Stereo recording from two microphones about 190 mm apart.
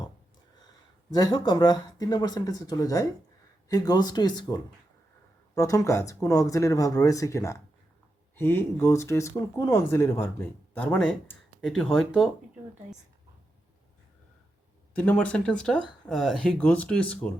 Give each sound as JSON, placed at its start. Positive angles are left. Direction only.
{"t": 1.1, "sound": "speech", "side_deg": 20}
{"t": 14.9, "sound": "speech", "side_deg": 5}